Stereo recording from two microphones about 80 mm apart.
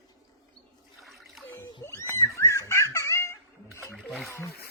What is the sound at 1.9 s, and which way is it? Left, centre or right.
Cat, left.